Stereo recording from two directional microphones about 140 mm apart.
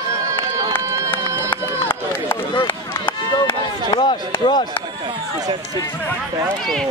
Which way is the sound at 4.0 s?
35° left (ahead or behind).